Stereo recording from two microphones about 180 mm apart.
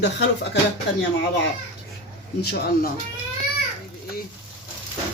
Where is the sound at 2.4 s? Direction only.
60° left (ahead or behind).